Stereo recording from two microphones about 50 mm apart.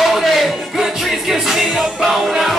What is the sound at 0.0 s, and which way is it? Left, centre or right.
Music, centre.